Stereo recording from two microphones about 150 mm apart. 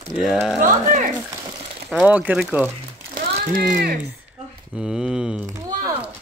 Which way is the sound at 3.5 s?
70° right (ahead or behind).